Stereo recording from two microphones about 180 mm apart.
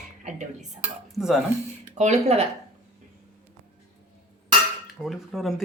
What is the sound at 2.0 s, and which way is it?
Speech, 40° right (ahead or behind).